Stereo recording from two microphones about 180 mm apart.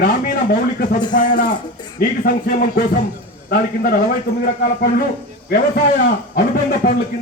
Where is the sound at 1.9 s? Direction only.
55° left (ahead or behind).